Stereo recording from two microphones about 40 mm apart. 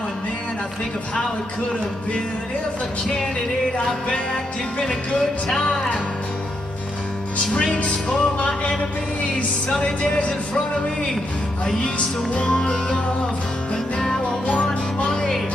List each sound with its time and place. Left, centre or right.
3.7 s music: left
7.5 s music: left
9.8 s music: left
12.4 s music: left
14.5 s music: left
15.1 s music: centre